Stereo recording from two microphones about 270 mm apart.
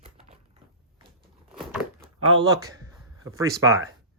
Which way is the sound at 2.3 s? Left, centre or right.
Centre.